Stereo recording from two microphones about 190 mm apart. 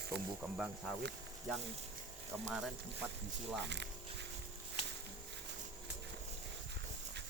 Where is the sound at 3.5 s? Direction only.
65° right (ahead or behind).